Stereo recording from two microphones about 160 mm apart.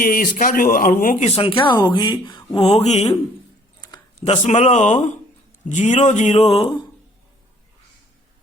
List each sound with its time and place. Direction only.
0.0 s a man's voice: 60° left (ahead or behind)
1.4 s speech: 35° left (ahead or behind)
2.6 s speech: 45° left (ahead or behind)
4.2 s speech: 40° left (ahead or behind)